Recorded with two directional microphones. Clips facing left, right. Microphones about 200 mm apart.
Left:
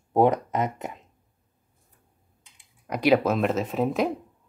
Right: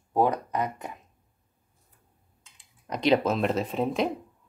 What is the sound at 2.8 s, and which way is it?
Speech, 10° left (ahead or behind).